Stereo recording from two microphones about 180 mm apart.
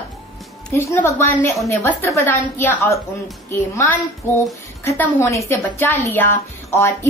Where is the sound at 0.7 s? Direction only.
15° left (ahead or behind).